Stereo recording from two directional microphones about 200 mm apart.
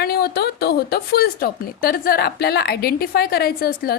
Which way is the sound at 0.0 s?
50° left (ahead or behind).